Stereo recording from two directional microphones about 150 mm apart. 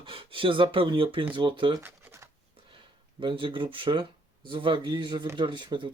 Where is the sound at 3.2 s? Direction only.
35° right (ahead or behind).